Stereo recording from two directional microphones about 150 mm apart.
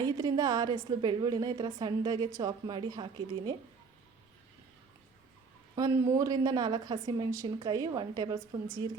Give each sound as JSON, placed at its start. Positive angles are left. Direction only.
{"t": 0.0, "sound": "a woman's voice", "side_deg": -25}
{"t": 5.7, "sound": "a woman's voice", "side_deg": -20}